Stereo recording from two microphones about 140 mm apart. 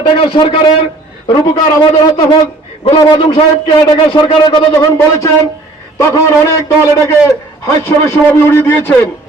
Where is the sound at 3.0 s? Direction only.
35° left (ahead or behind).